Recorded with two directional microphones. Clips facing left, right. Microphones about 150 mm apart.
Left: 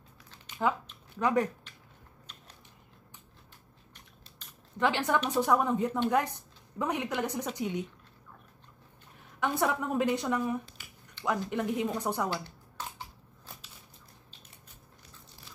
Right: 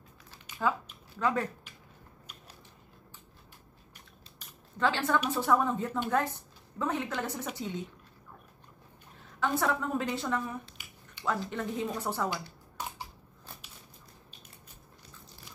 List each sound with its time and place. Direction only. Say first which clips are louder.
0.6 s speech: left 1 dB; 20° left (ahead or behind)
4.7 s a woman's voice: left 1 dB; 15° left (ahead or behind)
9.6 s a woman's voice: left 4 dB; 15° left (ahead or behind)
10.8 s finger snapping: even; 15° right (ahead or behind)
11.2 s a woman's voice: left 2 dB; 15° left (ahead or behind)
12.8 s a sound: right 2 dB; 15° right (ahead or behind)